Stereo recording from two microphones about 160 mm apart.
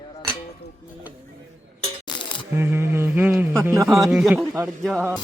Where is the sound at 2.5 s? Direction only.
15° right (ahead or behind).